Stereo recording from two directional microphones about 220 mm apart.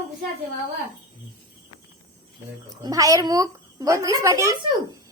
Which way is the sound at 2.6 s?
15° right (ahead or behind).